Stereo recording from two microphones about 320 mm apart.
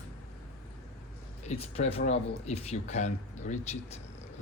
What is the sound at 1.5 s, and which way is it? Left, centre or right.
Speech, centre.